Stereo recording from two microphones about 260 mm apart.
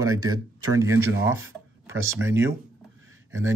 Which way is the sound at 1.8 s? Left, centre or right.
Centre.